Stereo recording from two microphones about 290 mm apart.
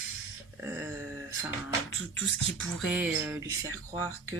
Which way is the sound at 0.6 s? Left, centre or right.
Centre.